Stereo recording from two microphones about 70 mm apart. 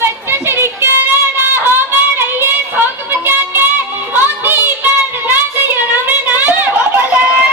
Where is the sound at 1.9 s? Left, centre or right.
Right.